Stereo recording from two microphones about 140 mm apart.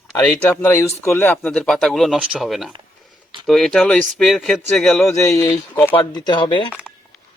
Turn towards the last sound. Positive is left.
turn(degrees=35)  # may be behind; listen again after turning